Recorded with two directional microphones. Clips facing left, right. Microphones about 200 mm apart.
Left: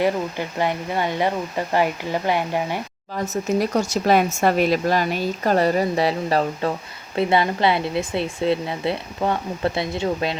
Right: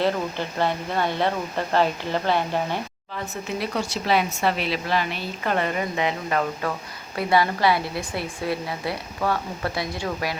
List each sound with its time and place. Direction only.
0.0 s speech: 15° left (ahead or behind)
3.6 s speech: 45° left (ahead or behind); by 10.3 s 25° left (ahead or behind)